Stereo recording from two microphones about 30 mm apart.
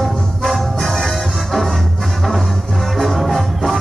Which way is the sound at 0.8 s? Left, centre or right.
Centre.